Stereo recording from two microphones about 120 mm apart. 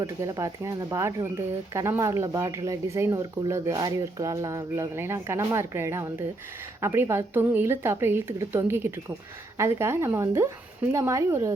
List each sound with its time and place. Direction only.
0.0 s speech: 25° right (ahead or behind)